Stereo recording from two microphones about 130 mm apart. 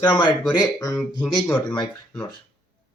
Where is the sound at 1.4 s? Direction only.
10° left (ahead or behind).